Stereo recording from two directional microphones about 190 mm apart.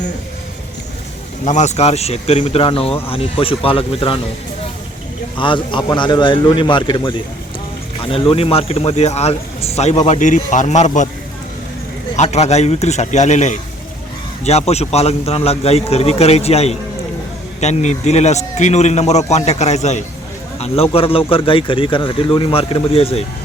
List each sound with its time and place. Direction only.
1.5 s speech: 40° left (ahead or behind)
5.4 s speech: 25° left (ahead or behind)
12.1 s speech: 35° left (ahead or behind)